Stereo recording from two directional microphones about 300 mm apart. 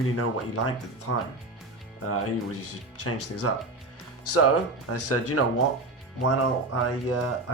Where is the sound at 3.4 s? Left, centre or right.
Left.